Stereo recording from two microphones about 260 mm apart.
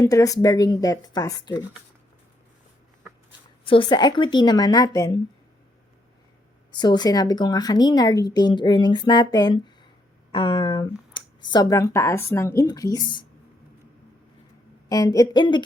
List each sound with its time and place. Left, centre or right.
0.0 s a woman's voice: centre
3.6 s a woman's voice: centre
6.7 s a woman's voice: centre
14.8 s a woman's voice: centre